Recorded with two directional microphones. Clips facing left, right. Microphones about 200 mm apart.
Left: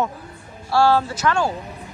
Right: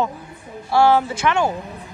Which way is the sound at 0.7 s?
20° right (ahead or behind).